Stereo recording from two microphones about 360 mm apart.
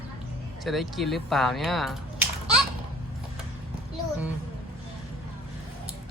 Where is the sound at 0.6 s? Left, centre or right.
Centre.